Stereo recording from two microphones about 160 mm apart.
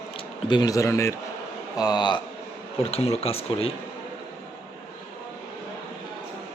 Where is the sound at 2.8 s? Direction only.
40° left (ahead or behind).